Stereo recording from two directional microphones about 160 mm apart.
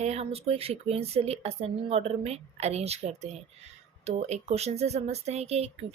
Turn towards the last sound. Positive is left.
turn(degrees=-40)  # may be behind; listen again after turning